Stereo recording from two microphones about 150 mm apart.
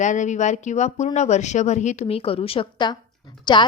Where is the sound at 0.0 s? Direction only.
55° left (ahead or behind).